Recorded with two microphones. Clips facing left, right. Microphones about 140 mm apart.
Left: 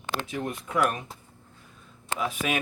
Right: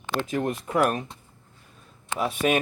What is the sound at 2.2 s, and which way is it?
Speech, 40° right (ahead or behind).